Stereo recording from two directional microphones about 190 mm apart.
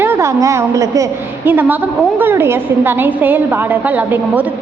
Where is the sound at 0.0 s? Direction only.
15° right (ahead or behind).